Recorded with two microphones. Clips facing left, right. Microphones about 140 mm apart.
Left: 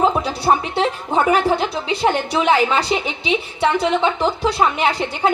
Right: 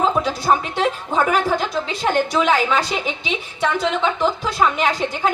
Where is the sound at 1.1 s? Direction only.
25° left (ahead or behind).